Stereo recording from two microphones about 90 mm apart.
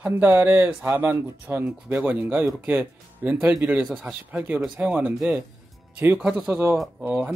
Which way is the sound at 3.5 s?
10° right (ahead or behind).